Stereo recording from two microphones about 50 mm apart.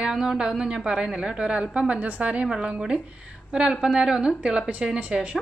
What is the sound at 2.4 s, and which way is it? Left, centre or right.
A woman's voice, centre.